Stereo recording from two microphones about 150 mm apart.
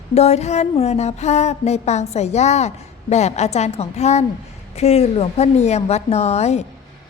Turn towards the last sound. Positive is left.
turn(degrees=45)  # may be behind; listen again after turning